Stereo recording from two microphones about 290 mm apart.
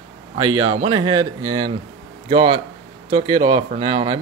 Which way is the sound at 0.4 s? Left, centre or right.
Centre.